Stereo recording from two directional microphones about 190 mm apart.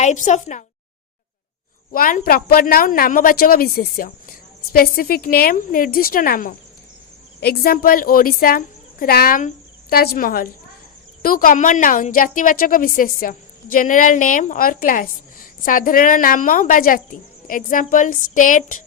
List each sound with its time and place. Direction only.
0.0 s a woman's voice: 40° left (ahead or behind)
1.9 s a woman's voice: 45° left (ahead or behind)